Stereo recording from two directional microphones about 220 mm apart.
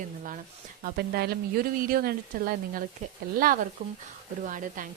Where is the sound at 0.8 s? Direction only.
45° right (ahead or behind).